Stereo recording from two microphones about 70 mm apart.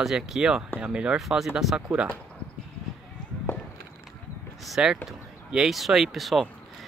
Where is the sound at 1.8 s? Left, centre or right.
Right.